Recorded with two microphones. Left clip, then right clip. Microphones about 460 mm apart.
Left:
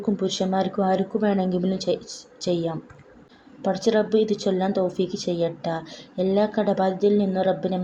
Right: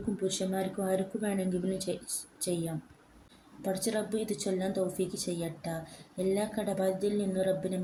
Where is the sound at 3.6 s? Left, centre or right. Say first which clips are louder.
Left 11 dB; right.